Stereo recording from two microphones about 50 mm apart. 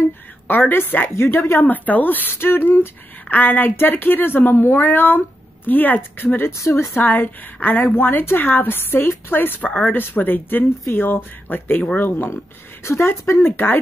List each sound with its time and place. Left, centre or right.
0.5 s a woman's voice: left
2.3 s a woman's voice: left
6.5 s speech: left
7.0 s a woman's voice: left
9.6 s a woman's voice: left
12.8 s speech: left
13.5 s a woman's voice: left